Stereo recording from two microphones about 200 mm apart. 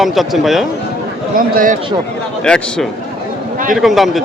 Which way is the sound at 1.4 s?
45° right (ahead or behind).